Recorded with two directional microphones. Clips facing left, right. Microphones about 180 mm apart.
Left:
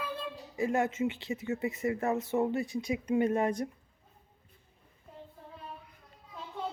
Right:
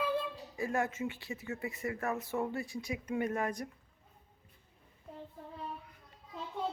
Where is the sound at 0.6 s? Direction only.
20° left (ahead or behind).